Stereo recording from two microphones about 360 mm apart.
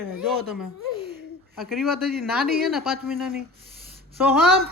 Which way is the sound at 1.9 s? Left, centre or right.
Right.